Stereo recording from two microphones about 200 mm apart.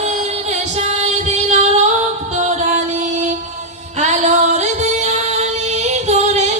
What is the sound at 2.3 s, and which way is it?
Music, 35° right (ahead or behind).